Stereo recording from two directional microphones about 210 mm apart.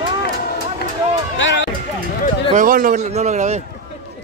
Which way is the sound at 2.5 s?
40° right (ahead or behind).